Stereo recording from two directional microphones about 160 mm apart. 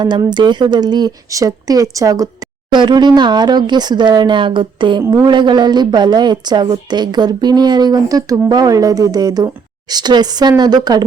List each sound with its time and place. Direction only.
0.0 s a woman's voice: 30° right (ahead or behind)